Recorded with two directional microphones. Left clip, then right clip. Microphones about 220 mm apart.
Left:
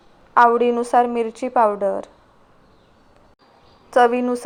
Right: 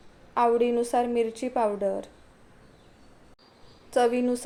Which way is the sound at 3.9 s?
15° left (ahead or behind).